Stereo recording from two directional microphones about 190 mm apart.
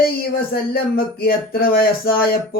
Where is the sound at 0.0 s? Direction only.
50° left (ahead or behind).